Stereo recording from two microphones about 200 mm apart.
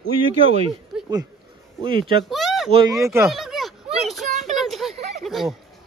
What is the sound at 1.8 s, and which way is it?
Speech, 25° right (ahead or behind).